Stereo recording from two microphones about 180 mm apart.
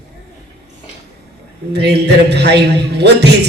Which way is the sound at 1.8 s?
70° right (ahead or behind).